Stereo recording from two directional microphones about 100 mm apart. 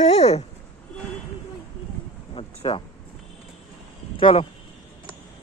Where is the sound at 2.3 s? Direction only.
70° left (ahead or behind).